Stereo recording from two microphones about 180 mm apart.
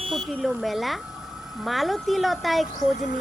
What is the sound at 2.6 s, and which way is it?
Speech, 45° left (ahead or behind).